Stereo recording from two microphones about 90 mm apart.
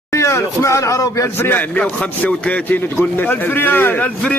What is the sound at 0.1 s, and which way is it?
Speech, 30° left (ahead or behind).